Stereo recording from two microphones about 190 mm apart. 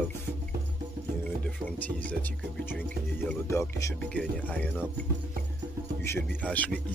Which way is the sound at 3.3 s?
15° left (ahead or behind).